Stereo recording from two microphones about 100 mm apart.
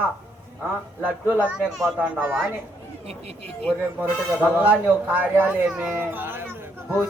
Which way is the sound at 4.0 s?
15° right (ahead or behind).